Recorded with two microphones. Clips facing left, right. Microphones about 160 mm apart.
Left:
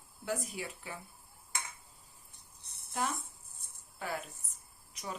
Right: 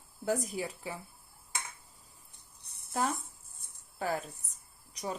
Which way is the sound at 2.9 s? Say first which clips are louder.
Right 4 dB; 40° right (ahead or behind).